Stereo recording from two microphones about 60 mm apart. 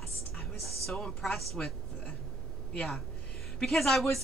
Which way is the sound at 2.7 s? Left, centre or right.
Centre.